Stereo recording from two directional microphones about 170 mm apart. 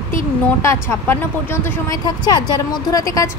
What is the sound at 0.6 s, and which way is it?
A woman's voice, 15° left (ahead or behind).